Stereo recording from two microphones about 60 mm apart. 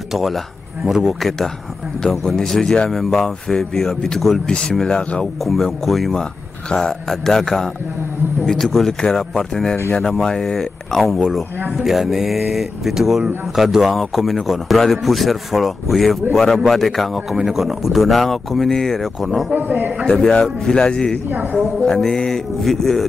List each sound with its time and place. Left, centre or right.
0.1 s a man's voice: centre
2.0 s mantra: centre
2.9 s a man's voice: centre
4.5 s mantra: centre
5.4 s a man's voice: centre
6.7 s mantra: centre
10.1 s a man's voice: centre
19.5 s speech: right
20.1 s mantra: centre
21.3 s speech: right
21.8 s mantra: centre